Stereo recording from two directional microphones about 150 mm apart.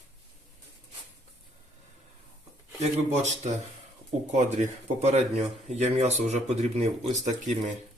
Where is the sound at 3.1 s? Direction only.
45° right (ahead or behind).